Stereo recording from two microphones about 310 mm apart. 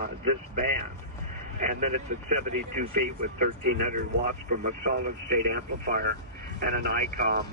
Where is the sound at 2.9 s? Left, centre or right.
Right.